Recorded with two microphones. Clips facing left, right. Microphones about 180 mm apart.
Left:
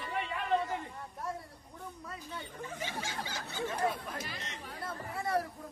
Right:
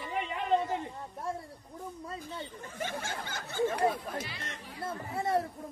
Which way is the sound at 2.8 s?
55° right (ahead or behind).